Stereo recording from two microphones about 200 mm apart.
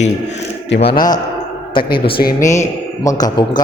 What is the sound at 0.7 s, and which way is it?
Speech, 55° left (ahead or behind).